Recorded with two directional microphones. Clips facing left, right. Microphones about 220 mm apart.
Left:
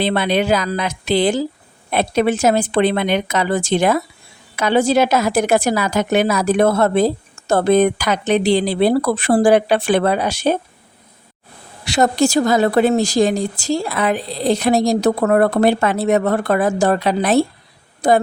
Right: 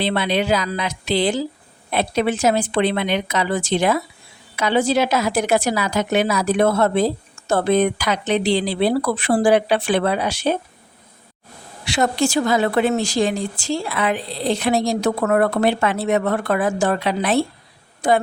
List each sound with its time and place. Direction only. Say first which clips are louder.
0.0 s a woman's voice: left 3 dB; 50° left (ahead or behind)
11.9 s a woman's voice: left 4 dB; 40° left (ahead or behind)